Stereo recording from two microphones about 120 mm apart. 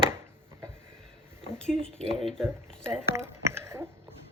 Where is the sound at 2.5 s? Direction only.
20° right (ahead or behind).